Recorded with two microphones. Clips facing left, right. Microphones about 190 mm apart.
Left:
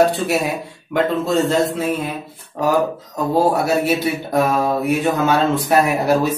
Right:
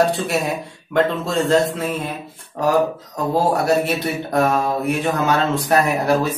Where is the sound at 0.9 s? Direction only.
Centre (ahead or behind).